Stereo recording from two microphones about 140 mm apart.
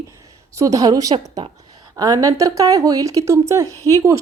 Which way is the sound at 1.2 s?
50° right (ahead or behind).